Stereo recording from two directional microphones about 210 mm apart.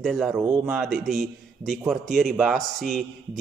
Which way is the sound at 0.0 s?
5° right (ahead or behind).